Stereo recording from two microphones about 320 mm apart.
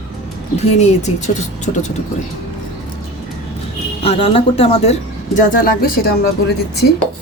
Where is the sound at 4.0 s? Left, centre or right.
Centre.